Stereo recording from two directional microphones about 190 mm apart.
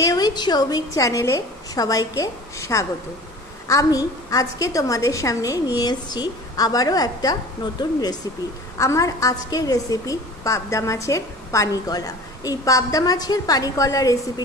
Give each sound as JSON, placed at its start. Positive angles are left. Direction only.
{"t": 0.0, "sound": "a woman's voice", "side_deg": 20}